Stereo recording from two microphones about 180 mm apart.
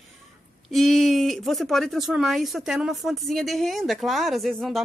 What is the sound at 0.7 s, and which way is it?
Speech, centre (ahead or behind).